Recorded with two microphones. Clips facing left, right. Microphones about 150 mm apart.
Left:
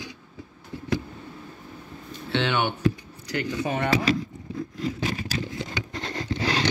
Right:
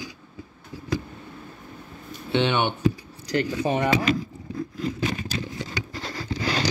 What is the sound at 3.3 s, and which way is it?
Speech, 35° right (ahead or behind).